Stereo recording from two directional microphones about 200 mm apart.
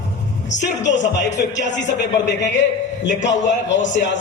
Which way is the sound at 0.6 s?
65° left (ahead or behind).